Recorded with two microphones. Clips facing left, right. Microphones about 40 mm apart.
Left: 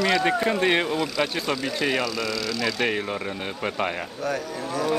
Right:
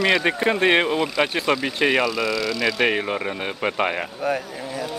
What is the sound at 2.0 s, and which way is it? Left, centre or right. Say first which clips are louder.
Speech: right 5 dB; centre.